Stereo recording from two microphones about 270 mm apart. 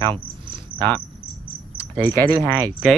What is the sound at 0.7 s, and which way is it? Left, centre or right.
Speech, centre.